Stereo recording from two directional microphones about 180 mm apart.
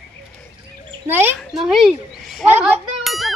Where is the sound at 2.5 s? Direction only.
10° right (ahead or behind).